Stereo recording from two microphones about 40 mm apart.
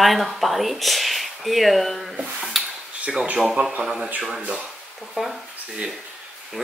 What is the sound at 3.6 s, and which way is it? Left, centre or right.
Speech, right.